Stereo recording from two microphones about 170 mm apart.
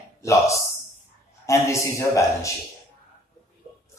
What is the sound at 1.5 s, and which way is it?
Speech, 15° left (ahead or behind).